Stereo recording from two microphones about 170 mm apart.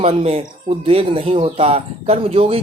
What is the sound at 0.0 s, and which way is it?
Speech, 35° right (ahead or behind).